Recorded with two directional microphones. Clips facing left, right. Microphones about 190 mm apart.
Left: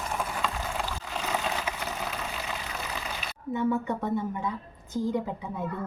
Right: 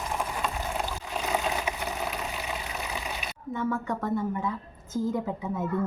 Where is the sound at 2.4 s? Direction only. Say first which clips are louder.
Right 1 dB; 15° right (ahead or behind).